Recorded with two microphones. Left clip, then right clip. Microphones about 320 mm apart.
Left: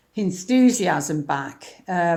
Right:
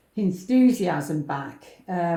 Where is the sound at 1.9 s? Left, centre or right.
Left.